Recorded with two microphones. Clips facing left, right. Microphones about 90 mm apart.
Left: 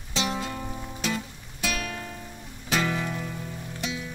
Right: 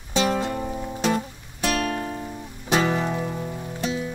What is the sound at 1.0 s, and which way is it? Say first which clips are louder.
Music: right 7 dB; 45° right (ahead or behind).